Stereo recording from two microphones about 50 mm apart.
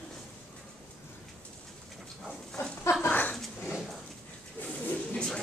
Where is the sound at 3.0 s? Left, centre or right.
Left.